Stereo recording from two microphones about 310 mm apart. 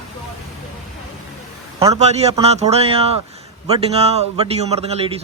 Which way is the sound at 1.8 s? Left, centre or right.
Centre.